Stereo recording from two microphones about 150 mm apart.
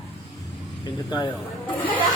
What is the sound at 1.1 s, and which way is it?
Speech, 30° left (ahead or behind).